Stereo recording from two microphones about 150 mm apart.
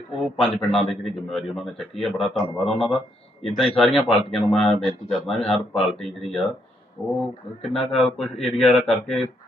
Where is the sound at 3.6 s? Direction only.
5° left (ahead or behind).